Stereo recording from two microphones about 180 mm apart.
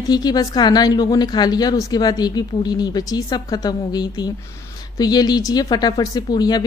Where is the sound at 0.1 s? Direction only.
20° left (ahead or behind).